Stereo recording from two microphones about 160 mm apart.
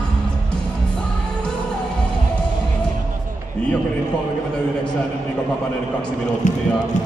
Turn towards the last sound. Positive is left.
turn(degrees=50)  # may be behind; listen again after turning